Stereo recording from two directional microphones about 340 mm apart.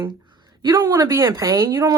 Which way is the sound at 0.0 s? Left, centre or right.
Centre.